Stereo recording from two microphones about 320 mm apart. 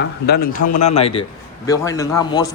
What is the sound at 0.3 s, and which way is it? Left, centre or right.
A man's voice, left.